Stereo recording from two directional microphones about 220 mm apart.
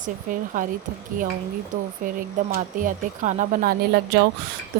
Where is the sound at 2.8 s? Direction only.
35° right (ahead or behind).